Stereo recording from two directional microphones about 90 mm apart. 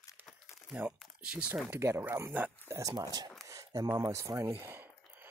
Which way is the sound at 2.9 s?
50° right (ahead or behind).